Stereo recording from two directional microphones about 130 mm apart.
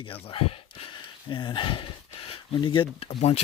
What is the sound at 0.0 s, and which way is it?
Speech, 45° left (ahead or behind).